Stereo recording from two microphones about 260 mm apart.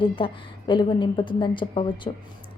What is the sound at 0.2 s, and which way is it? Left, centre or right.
A woman's voice, centre.